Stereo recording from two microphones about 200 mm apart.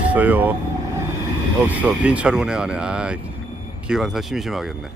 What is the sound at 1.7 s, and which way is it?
Speech, 5° right (ahead or behind).